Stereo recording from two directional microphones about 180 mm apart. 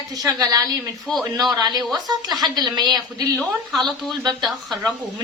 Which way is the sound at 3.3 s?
Centre (ahead or behind).